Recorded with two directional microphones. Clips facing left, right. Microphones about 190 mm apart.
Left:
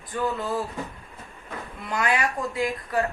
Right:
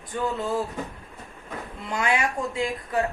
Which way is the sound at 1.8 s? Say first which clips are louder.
Even; 20° right (ahead or behind).